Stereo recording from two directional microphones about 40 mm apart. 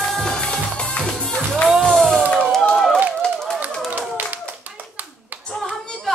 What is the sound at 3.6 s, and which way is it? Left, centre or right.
Clapping, right.